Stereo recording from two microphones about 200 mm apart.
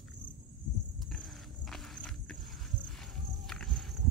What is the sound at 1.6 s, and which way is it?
Walk, centre (ahead or behind).